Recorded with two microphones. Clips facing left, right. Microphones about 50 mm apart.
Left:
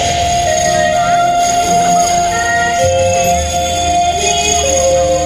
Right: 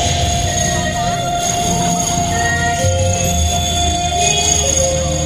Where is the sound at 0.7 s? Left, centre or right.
Left.